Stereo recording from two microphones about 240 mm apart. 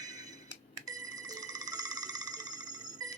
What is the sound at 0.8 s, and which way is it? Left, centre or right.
Ringtone, centre.